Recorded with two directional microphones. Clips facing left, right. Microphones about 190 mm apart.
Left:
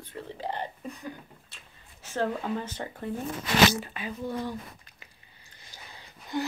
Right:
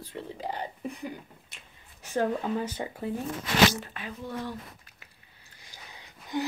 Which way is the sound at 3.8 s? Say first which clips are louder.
Left 4 dB; 5° left (ahead or behind).